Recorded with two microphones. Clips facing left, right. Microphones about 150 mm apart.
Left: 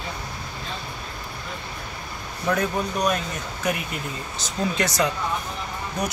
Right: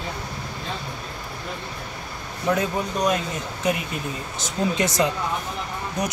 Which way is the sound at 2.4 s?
20° right (ahead or behind).